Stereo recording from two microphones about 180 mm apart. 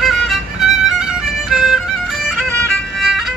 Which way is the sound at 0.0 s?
Centre (ahead or behind).